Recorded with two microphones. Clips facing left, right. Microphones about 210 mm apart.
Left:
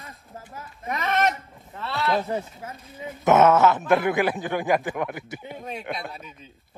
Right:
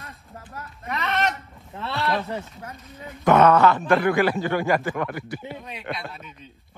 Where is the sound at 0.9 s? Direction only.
45° left (ahead or behind).